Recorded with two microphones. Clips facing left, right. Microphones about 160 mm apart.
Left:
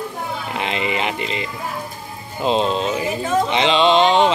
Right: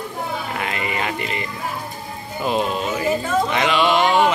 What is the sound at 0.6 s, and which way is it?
Speech, 20° left (ahead or behind).